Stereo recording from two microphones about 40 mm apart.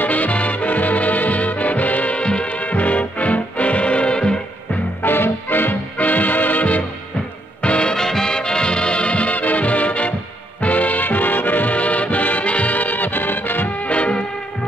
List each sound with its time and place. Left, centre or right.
0.0 s music: left
5.0 s music: left
5.9 s music: left
7.6 s music: left
7.9 s music: centre; by 13.7 s left
13.7 s music: left